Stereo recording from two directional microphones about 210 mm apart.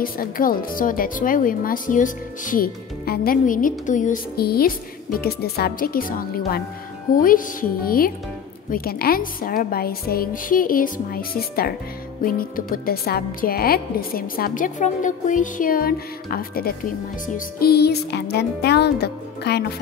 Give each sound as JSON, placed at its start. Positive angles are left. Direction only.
{"t": 0.0, "sound": "a woman's voice", "side_deg": 45}